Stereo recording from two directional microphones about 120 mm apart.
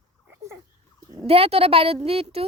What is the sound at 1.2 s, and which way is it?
A woman's voice, 55° right (ahead or behind).